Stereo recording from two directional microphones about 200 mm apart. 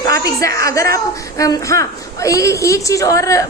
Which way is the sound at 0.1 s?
15° left (ahead or behind).